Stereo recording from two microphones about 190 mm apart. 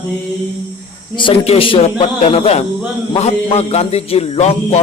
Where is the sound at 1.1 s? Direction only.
25° left (ahead or behind).